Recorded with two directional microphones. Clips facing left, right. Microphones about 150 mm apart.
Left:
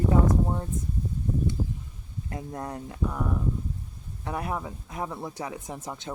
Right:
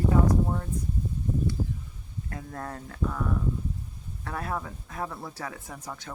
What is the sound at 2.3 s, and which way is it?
Speech, 20° left (ahead or behind).